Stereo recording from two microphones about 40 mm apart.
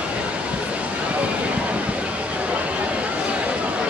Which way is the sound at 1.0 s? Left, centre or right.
Right.